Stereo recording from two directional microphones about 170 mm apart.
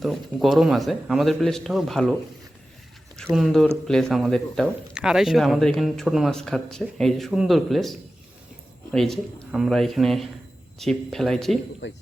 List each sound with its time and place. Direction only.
0.0 s speech: centre (ahead or behind)
3.3 s speech: centre (ahead or behind)
11.8 s speech: 90° left